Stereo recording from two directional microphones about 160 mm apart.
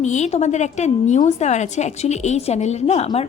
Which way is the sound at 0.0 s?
45° left (ahead or behind).